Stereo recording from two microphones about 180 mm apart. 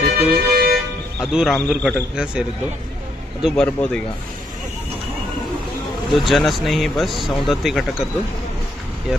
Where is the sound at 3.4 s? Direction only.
5° left (ahead or behind).